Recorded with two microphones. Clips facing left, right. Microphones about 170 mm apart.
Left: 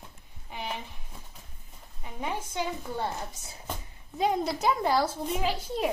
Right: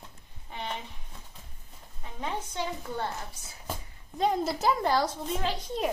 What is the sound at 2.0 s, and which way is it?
A woman's voice, 10° left (ahead or behind).